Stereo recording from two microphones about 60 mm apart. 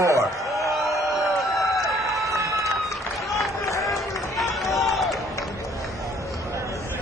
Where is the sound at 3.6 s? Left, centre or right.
Left.